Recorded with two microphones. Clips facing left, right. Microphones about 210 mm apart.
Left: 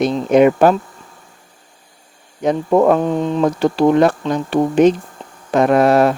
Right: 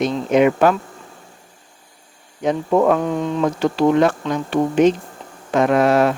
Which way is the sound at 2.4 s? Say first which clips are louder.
Left 3 dB; 40° left (ahead or behind).